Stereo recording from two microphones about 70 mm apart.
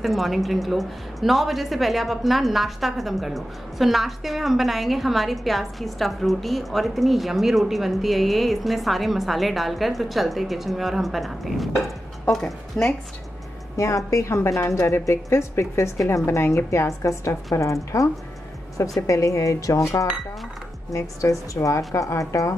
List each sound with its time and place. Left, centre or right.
0.0 s a woman's voice: centre
13.7 s a woman's voice: left